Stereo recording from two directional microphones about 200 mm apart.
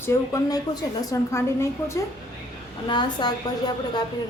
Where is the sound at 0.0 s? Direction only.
15° left (ahead or behind).